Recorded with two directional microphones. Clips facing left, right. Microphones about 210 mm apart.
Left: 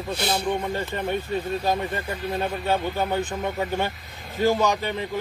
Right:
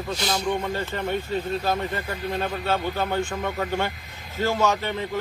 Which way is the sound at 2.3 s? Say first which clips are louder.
Left 1 dB; 15° left (ahead or behind).